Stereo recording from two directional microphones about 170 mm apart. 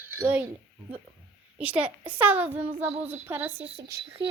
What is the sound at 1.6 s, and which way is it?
A child's voice, 10° right (ahead or behind).